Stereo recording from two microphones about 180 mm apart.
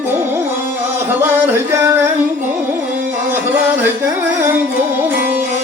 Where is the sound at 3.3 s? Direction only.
10° right (ahead or behind).